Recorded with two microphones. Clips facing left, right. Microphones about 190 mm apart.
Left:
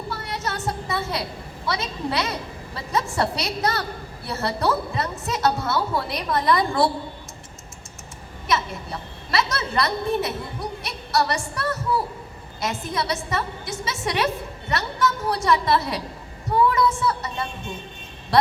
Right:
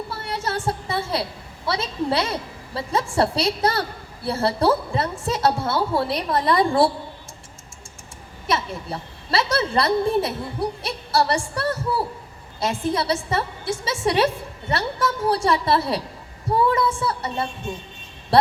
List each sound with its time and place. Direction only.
0.1 s a woman's voice: 30° right (ahead or behind)
8.4 s a woman's voice: 30° right (ahead or behind)